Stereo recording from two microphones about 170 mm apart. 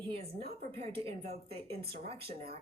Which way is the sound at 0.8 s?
35° right (ahead or behind).